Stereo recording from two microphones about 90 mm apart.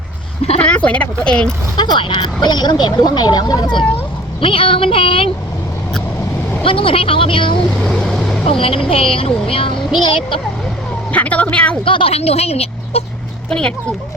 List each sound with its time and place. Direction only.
0.6 s speech: 10° left (ahead or behind)
1.7 s speech: 55° left (ahead or behind)
4.4 s speech: 85° left
6.6 s speech: 85° left
7.9 s boat: 5° left (ahead or behind)
8.4 s speech: 90° left; by 10.4 s 70° left (ahead or behind)
11.1 s a woman's voice: 15° left (ahead or behind)
11.9 s a woman's voice: 75° left (ahead or behind)
12.9 s speech: 90° left
13.5 s speech: 10° left (ahead or behind)